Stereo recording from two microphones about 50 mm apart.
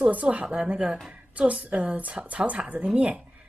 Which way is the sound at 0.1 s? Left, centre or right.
Right.